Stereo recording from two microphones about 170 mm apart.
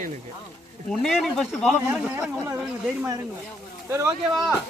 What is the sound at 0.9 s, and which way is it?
Speech, centre (ahead or behind).